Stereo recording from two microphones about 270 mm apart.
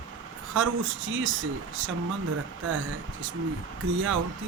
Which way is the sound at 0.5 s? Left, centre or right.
Right.